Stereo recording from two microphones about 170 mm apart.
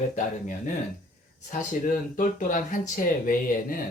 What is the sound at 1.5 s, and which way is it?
Speech, 50° left (ahead or behind).